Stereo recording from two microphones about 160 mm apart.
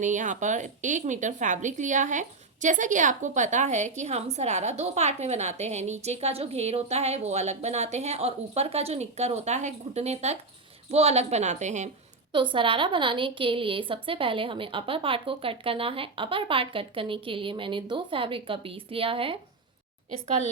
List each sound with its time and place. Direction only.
0.0 s speech: 50° right (ahead or behind)
12.3 s a woman's voice: 30° right (ahead or behind)
20.1 s speech: 45° right (ahead or behind)